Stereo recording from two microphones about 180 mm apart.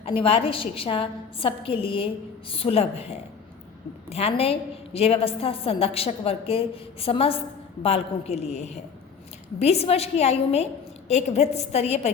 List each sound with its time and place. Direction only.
0.0 s a woman's voice: 30° left (ahead or behind)